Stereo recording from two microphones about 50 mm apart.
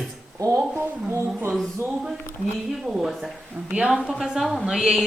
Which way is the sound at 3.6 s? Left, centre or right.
Right.